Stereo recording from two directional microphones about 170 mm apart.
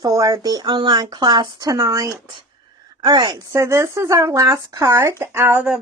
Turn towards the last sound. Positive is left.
turn(degrees=-10)  # may be behind; listen again after turning